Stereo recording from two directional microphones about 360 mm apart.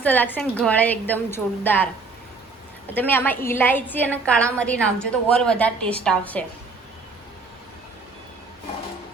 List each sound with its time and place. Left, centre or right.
0.0 s a woman's voice: centre